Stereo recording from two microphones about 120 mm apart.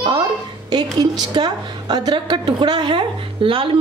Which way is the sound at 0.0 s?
35° right (ahead or behind).